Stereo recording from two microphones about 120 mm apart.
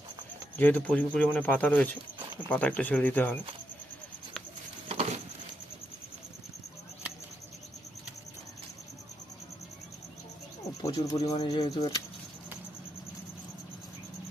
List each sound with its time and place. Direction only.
0.5 s speech: 15° left (ahead or behind)
4.9 s patter: 60° right (ahead or behind)
10.9 s speech: 35° left (ahead or behind)